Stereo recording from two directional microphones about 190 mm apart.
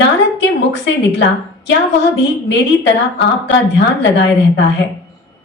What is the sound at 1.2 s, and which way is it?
A woman's voice, 65° left (ahead or behind).